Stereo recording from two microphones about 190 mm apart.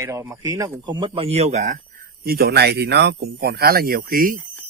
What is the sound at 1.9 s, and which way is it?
Speech, 50° right (ahead or behind).